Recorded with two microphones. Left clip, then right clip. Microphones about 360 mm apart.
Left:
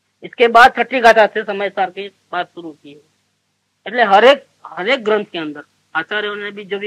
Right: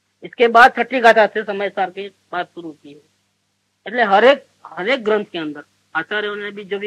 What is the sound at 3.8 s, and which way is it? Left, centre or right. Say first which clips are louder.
Speech: left 3 dB; right.